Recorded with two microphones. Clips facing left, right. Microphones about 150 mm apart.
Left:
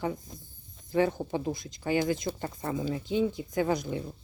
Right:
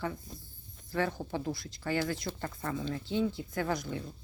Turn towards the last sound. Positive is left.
turn(degrees=20)  # may be behind; listen again after turning